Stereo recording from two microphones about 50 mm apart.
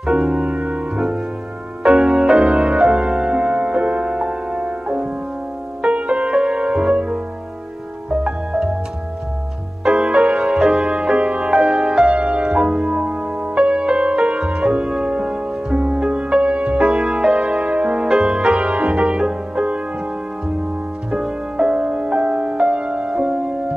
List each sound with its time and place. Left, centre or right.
0.0 s music: centre
9.9 s music: right
18.0 s music: centre
21.1 s music: centre